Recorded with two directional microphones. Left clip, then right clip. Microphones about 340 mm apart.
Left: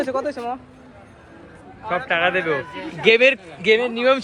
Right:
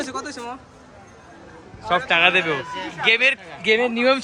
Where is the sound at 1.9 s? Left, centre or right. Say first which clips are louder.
Right 3 dB; centre.